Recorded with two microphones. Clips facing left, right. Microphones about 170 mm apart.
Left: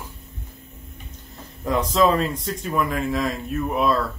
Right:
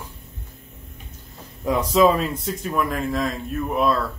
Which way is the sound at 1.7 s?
10° right (ahead or behind).